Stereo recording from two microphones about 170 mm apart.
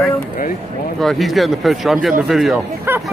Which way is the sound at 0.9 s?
Centre (ahead or behind).